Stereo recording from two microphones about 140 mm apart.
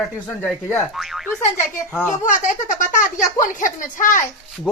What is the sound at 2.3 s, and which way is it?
Speech, 65° left (ahead or behind).